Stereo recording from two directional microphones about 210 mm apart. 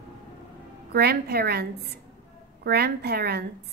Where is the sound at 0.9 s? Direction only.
50° right (ahead or behind).